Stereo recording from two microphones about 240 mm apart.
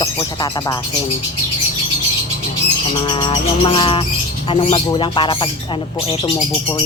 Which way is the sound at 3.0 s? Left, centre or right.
Centre.